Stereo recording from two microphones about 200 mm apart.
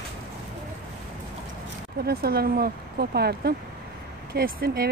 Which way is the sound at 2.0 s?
50° right (ahead or behind).